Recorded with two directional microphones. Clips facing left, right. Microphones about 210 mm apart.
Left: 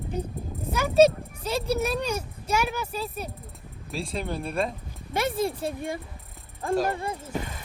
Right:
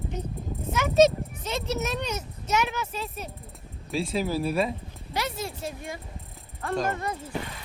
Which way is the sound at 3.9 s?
Centre (ahead or behind).